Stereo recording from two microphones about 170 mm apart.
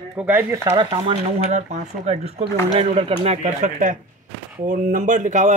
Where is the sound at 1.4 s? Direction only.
45° right (ahead or behind).